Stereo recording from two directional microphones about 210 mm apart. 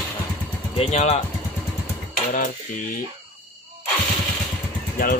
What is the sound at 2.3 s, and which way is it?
Speech, 40° left (ahead or behind).